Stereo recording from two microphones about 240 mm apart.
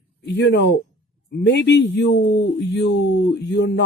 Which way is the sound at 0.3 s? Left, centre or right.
Left.